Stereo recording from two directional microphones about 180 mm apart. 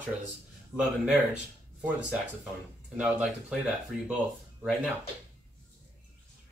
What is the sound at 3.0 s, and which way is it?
Speech, 5° right (ahead or behind).